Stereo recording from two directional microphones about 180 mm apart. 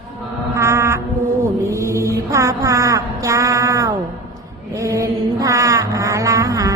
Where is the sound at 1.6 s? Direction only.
15° right (ahead or behind).